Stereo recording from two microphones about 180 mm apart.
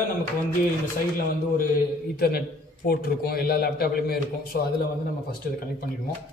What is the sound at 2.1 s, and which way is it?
A man's voice, 60° left (ahead or behind).